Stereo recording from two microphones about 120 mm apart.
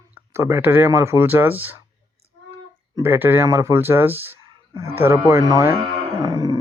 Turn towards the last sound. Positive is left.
turn(degrees=-30)  # may be behind; listen again after turning